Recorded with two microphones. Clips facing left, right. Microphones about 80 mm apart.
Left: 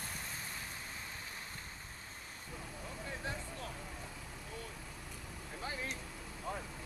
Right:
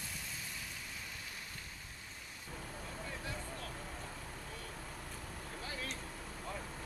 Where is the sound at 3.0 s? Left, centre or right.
Left.